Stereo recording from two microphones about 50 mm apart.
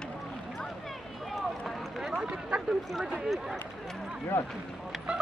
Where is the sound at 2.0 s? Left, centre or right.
Centre.